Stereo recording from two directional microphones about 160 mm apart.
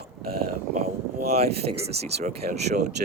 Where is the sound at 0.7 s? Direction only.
40° right (ahead or behind).